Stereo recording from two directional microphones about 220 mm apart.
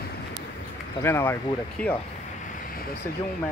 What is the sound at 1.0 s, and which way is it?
Speech, 10° left (ahead or behind).